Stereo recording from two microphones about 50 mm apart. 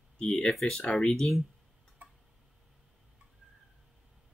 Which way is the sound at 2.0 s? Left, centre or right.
Right.